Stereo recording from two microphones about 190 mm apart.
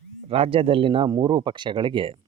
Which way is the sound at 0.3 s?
30° right (ahead or behind).